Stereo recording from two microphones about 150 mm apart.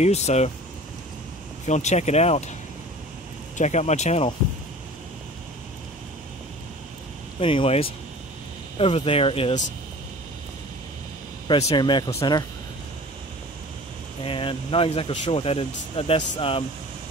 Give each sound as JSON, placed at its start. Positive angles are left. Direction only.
{"t": 0.0, "sound": "speech", "side_deg": 45}
{"t": 1.7, "sound": "speech", "side_deg": 50}
{"t": 3.5, "sound": "speech", "side_deg": 50}
{"t": 7.3, "sound": "speech", "side_deg": 40}
{"t": 11.4, "sound": "speech", "side_deg": 35}
{"t": 14.2, "sound": "speech", "side_deg": 35}